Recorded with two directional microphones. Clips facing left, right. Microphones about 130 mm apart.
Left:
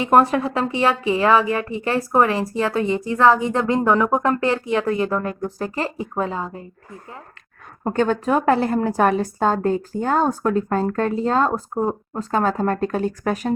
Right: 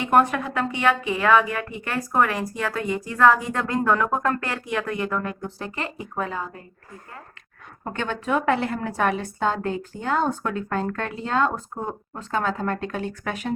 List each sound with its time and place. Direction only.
0.0 s a woman's voice: 30° left (ahead or behind)
7.9 s a woman's voice: 40° left (ahead or behind)